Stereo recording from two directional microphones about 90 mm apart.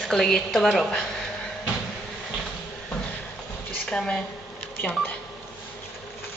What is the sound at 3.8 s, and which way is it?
Speech, 10° left (ahead or behind).